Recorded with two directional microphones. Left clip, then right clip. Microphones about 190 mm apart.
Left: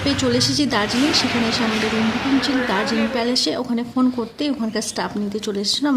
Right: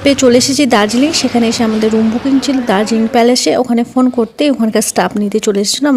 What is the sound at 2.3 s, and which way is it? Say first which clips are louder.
A woman's voice: right 8 dB; 40° right (ahead or behind).